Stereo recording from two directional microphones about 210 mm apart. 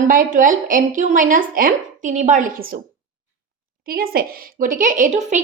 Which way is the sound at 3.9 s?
45° right (ahead or behind).